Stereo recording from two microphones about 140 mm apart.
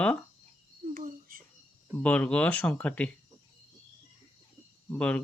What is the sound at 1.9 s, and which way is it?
Speech, 10° left (ahead or behind).